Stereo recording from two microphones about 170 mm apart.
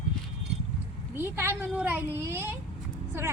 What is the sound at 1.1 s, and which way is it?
Speech, 15° right (ahead or behind).